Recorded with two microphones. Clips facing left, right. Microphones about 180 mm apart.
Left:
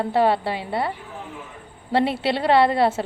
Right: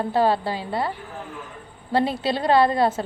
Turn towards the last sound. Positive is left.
turn(degrees=25)  # may be behind; listen again after turning